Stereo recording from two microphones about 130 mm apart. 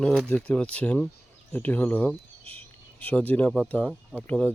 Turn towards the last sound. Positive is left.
turn(degrees=10)  # may be behind; listen again after turning